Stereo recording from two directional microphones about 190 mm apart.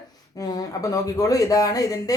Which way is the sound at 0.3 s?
20° left (ahead or behind).